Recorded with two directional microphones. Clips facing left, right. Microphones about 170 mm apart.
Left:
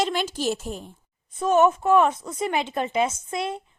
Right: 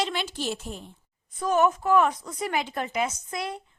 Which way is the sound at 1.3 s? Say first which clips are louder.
Left 4 dB; 25° left (ahead or behind).